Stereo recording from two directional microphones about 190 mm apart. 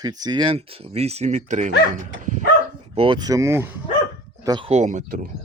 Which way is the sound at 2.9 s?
30° right (ahead or behind).